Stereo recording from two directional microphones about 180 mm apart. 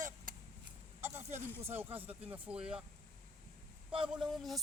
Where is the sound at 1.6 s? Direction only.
10° right (ahead or behind).